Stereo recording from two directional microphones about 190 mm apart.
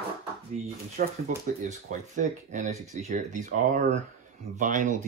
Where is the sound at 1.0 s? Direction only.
50° right (ahead or behind).